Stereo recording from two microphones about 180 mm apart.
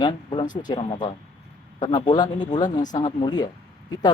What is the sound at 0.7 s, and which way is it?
Speech, 25° left (ahead or behind).